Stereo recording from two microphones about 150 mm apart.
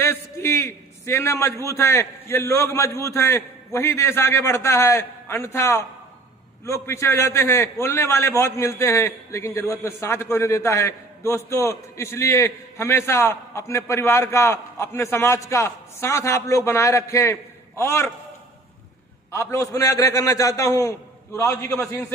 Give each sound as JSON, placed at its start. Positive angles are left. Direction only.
{"t": 0.0, "sound": "a man's voice", "side_deg": 15}
{"t": 19.3, "sound": "a man's voice", "side_deg": 20}